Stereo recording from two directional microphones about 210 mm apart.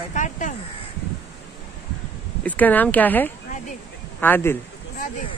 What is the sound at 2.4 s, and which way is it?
Speech, 10° left (ahead or behind).